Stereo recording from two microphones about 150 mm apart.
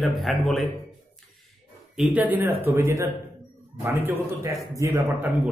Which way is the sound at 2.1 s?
10° right (ahead or behind).